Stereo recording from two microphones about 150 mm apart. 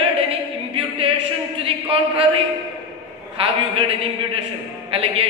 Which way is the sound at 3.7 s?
40° right (ahead or behind).